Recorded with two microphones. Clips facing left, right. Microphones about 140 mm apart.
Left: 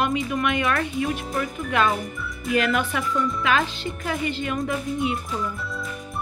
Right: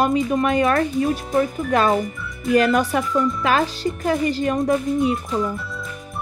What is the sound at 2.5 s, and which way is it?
Speech, 35° right (ahead or behind).